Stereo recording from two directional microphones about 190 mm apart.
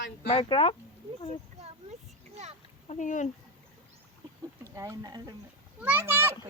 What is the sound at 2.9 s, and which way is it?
Speech, 40° left (ahead or behind).